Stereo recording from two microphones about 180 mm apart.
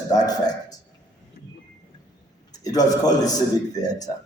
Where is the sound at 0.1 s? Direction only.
20° left (ahead or behind).